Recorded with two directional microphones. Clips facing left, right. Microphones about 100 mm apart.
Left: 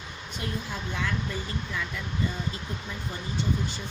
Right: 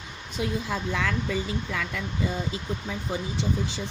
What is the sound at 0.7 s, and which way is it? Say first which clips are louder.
Speech: right 4 dB; 90° right.